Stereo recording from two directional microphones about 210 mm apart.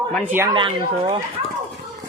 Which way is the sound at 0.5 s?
25° right (ahead or behind).